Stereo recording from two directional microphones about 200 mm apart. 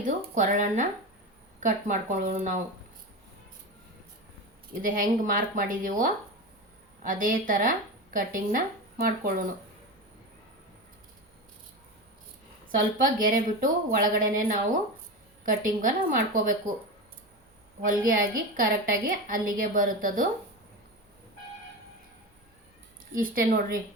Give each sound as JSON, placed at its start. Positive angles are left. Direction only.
{"t": 0.0, "sound": "a woman's voice", "side_deg": -40}
{"t": 4.8, "sound": "speech", "side_deg": -45}
{"t": 12.6, "sound": "a woman's voice", "side_deg": -45}
{"t": 18.0, "sound": "speech", "side_deg": -45}
{"t": 23.1, "sound": "speech", "side_deg": -45}